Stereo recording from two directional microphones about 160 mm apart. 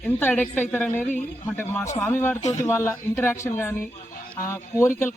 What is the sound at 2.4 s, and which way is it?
Speech, 45° left (ahead or behind).